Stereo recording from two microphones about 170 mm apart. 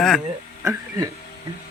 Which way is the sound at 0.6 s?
20° right (ahead or behind).